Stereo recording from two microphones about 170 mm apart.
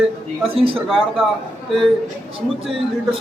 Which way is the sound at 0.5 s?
30° right (ahead or behind).